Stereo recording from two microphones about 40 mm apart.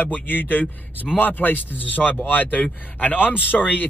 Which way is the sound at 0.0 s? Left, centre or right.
Left.